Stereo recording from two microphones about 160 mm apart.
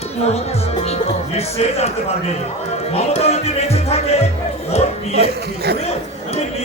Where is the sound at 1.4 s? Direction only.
40° left (ahead or behind).